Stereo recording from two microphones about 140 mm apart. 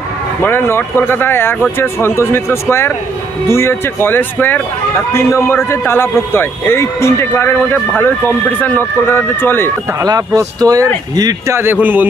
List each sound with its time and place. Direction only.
0.4 s a man's voice: 15° left (ahead or behind)
9.9 s speech: 25° right (ahead or behind)